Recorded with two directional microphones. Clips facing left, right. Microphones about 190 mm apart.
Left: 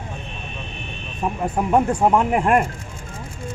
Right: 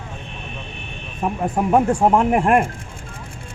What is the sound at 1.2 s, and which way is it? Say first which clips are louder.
Speech: right 2 dB; 10° right (ahead or behind).